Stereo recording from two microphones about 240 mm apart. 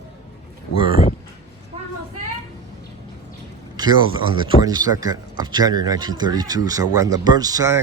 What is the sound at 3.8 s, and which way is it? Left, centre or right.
Speech, centre.